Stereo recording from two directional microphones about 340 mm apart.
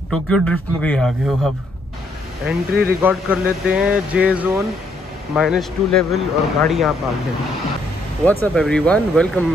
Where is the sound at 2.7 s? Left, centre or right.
Right.